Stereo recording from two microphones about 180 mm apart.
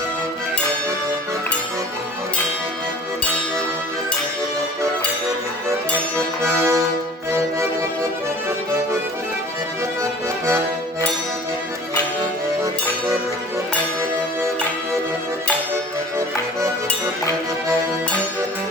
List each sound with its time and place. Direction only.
6.1 s music: 15° right (ahead or behind)
10.0 s music: 15° right (ahead or behind)
16.1 s music: 15° right (ahead or behind)